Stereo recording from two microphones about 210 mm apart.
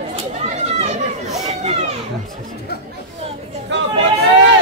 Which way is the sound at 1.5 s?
35° right (ahead or behind).